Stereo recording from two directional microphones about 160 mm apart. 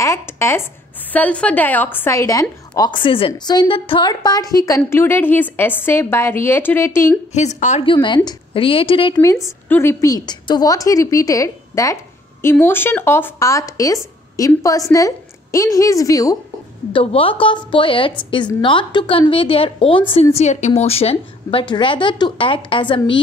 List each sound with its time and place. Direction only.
0.0 s a woman's voice: 15° left (ahead or behind)
7.3 s a woman's voice: 45° left (ahead or behind)
7.8 s a woman's voice: 30° left (ahead or behind)
9.7 s a woman's voice: 15° left (ahead or behind)
16.9 s a woman's voice: 35° left (ahead or behind)
20.3 s a woman's voice: 45° left (ahead or behind)